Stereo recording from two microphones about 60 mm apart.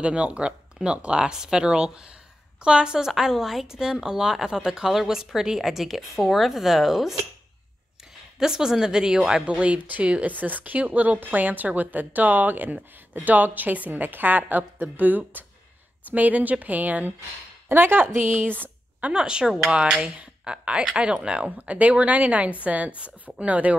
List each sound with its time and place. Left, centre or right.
0.0 s a woman's voice: centre
8.4 s a woman's voice: centre